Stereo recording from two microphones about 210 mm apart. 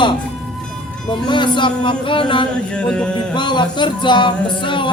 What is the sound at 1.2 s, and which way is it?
Music, 20° left (ahead or behind).